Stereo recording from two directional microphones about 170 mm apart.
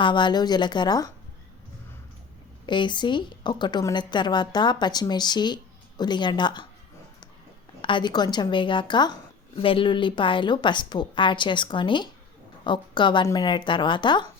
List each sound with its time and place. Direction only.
0.0 s a woman's voice: 25° left (ahead or behind)
2.6 s a woman's voice: 25° left (ahead or behind)
7.8 s a woman's voice: 30° left (ahead or behind)